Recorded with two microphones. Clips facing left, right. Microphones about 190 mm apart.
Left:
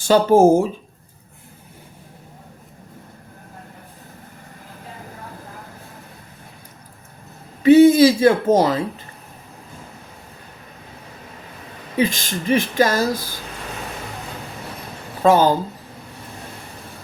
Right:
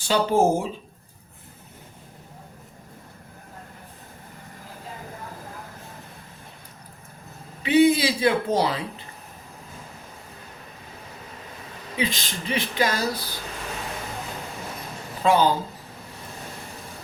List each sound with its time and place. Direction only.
0.0 s speech: 45° left (ahead or behind)
7.6 s speech: 45° left (ahead or behind)
11.9 s speech: 45° left (ahead or behind)
15.2 s speech: 45° left (ahead or behind)